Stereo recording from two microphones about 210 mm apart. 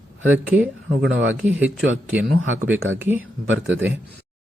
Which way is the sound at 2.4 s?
70° right (ahead or behind).